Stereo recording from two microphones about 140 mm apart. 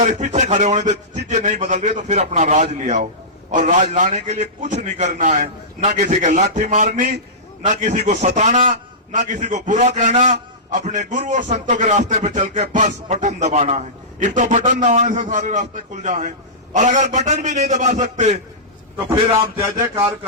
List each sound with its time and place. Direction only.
0.0 s a man's voice: 55° right (ahead or behind)